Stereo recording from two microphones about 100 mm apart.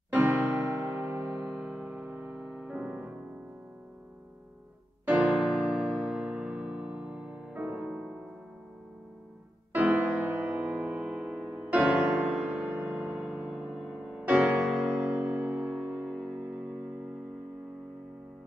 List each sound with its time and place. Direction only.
0.1 s electric piano: 20° right (ahead or behind)
0.9 s music: 25° right (ahead or behind)
1.5 s music: 5° right (ahead or behind)
5.0 s electric piano: 10° right (ahead or behind)
9.8 s music: 10° right (ahead or behind)